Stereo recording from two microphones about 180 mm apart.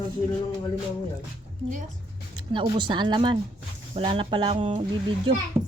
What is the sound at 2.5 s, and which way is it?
Speech, 25° right (ahead or behind).